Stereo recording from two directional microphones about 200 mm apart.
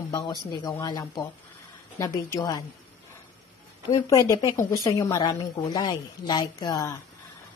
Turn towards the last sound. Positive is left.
turn(degrees=20)  # may be behind; listen again after turning